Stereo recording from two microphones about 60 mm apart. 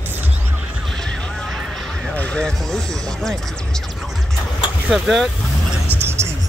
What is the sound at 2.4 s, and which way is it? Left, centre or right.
Music, centre.